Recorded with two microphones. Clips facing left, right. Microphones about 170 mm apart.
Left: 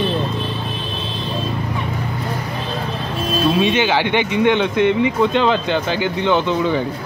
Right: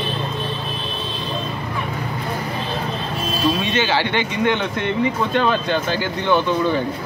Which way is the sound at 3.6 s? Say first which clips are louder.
Left 3 dB; 15° left (ahead or behind).